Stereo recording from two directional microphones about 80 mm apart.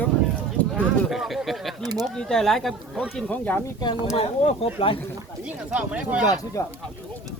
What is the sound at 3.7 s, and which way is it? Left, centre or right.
Speech, left.